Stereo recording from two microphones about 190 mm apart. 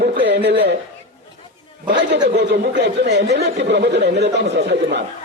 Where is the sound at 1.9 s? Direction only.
65° right (ahead or behind).